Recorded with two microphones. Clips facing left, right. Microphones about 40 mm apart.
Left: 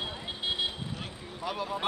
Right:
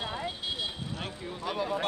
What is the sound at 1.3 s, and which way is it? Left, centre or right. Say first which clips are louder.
Speech: right 1 dB; centre.